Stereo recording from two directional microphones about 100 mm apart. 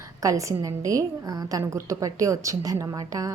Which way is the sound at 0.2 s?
35° right (ahead or behind).